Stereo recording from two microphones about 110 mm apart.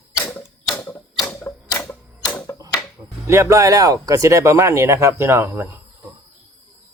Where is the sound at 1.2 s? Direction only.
20° left (ahead or behind).